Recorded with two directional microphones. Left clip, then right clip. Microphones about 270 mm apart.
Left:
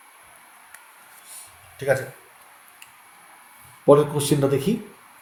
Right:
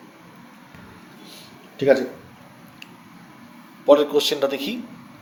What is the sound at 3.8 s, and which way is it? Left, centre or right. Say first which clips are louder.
Speech: right 1 dB; right.